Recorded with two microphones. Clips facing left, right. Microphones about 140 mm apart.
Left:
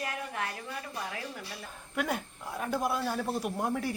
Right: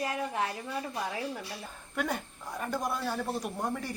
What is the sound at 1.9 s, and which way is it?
Speech, 5° left (ahead or behind).